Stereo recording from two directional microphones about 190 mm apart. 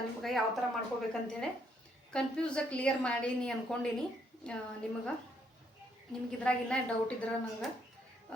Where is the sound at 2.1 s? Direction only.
5° left (ahead or behind).